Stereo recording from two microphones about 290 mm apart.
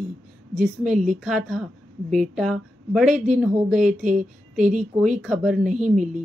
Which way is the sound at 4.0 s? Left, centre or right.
Right.